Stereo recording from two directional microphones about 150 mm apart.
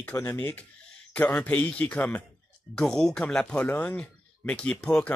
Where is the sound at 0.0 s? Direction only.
15° left (ahead or behind).